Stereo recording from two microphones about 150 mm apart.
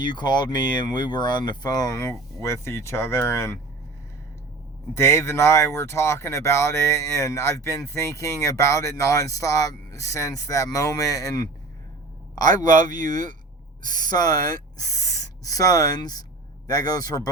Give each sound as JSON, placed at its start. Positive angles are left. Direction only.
{"t": 0.0, "sound": "speech", "side_deg": 30}
{"t": 4.9, "sound": "speech", "side_deg": 15}
{"t": 12.6, "sound": "speech", "side_deg": 25}